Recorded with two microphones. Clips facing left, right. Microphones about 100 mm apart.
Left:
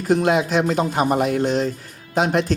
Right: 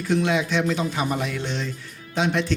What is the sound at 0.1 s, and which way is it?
Speech, 45° left (ahead or behind).